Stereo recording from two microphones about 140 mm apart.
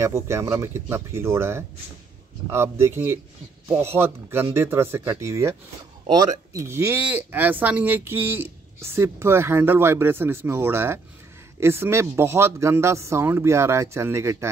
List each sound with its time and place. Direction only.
0.0 s speech: 20° right (ahead or behind)
6.5 s speech: 20° right (ahead or behind)